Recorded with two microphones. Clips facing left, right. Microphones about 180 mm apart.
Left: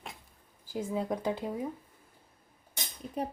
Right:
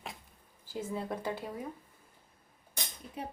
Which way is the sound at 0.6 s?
10° left (ahead or behind).